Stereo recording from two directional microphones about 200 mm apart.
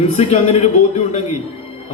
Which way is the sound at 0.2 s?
30° left (ahead or behind).